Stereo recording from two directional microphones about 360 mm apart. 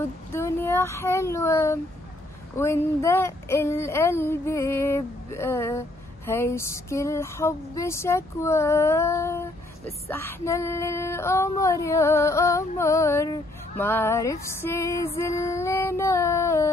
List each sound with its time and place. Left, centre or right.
0.3 s speech: centre